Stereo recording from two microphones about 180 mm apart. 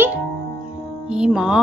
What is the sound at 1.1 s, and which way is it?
Music, 5° right (ahead or behind).